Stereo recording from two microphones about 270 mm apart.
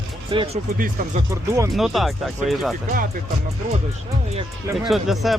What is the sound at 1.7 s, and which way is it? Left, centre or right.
Speech, centre.